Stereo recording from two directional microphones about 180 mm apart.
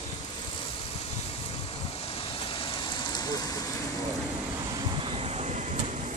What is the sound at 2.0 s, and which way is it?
Rain, 30° left (ahead or behind).